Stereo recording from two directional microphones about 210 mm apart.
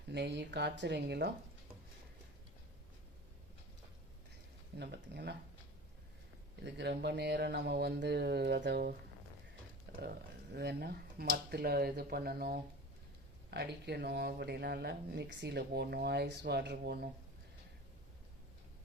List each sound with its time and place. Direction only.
0.1 s speech: 50° right (ahead or behind)
4.8 s speech: 50° right (ahead or behind)
6.6 s speech: 55° right (ahead or behind)
9.9 s a sound: 50° right (ahead or behind)
10.5 s speech: 50° right (ahead or behind)